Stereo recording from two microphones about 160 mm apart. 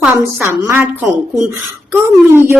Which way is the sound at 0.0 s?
10° right (ahead or behind).